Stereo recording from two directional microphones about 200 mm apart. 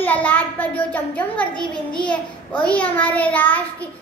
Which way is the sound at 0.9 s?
5° left (ahead or behind).